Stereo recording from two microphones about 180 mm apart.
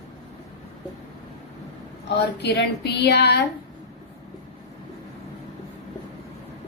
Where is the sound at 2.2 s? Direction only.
70° left (ahead or behind).